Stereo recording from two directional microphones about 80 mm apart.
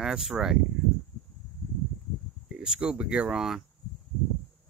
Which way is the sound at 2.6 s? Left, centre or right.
Centre.